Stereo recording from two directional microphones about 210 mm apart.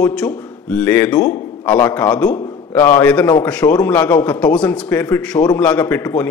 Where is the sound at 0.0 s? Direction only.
5° left (ahead or behind).